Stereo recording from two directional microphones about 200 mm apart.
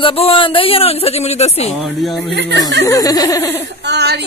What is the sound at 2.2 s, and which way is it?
Speech, 60° right (ahead or behind).